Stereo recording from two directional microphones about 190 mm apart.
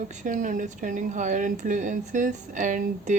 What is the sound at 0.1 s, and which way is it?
Speech, 40° right (ahead or behind).